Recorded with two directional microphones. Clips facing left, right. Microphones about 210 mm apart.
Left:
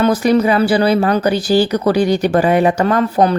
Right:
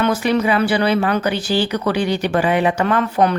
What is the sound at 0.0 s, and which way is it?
Speech, 40° left (ahead or behind).